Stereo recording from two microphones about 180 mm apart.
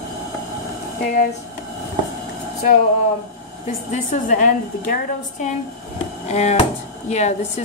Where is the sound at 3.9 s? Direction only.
45° left (ahead or behind).